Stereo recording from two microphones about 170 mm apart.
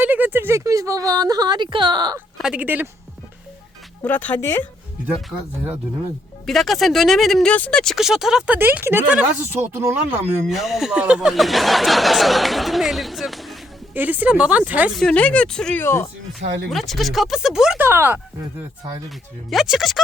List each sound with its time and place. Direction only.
0.0 s speech: 10° right (ahead or behind)
2.4 s speech: 10° right (ahead or behind)
4.0 s speech: 10° left (ahead or behind)
6.4 s speech: centre (ahead or behind)
10.5 s speech: centre (ahead or behind)
13.9 s speech: 10° right (ahead or behind)
14.9 s speech: 5° left (ahead or behind)
16.4 s speech: 90° right
16.6 s speech: centre (ahead or behind)
19.5 s speech: centre (ahead or behind)